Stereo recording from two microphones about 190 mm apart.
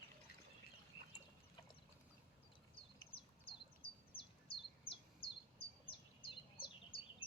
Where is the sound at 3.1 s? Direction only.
30° left (ahead or behind).